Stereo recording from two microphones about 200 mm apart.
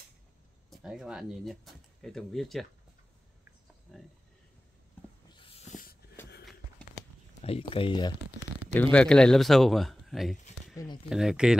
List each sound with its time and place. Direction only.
0.7 s speech: 5° right (ahead or behind)
5.3 s dog: 25° left (ahead or behind)
5.7 s a sound: 45° left (ahead or behind)
7.4 s speech: 30° left (ahead or behind)
8.7 s speech: 5° left (ahead or behind)